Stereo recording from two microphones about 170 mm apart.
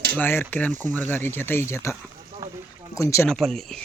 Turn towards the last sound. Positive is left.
turn(degrees=0)  # may be behind; listen again after turning